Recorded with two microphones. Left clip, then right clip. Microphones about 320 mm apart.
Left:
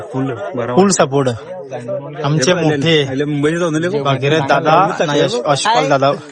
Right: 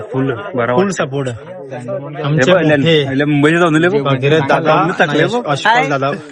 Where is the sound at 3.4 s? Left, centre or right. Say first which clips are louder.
Right 5 dB; right.